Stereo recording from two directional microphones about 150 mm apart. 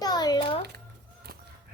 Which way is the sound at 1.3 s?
85° right.